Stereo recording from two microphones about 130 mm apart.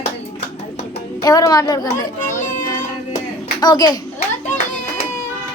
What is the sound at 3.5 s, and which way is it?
Speech, 30° left (ahead or behind).